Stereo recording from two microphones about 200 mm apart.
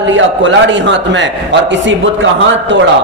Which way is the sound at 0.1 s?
65° right (ahead or behind).